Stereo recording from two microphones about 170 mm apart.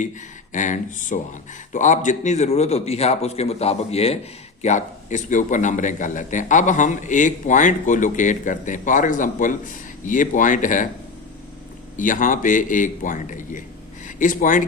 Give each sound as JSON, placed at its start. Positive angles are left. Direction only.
{"t": 0.5, "sound": "a man's voice", "side_deg": 50}
{"t": 11.9, "sound": "a man's voice", "side_deg": 50}